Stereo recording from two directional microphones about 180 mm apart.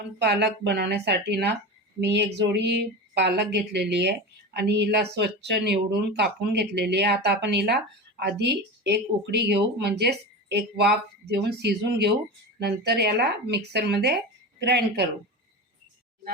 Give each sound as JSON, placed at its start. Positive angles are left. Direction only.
{"t": 0.2, "sound": "speech", "side_deg": -65}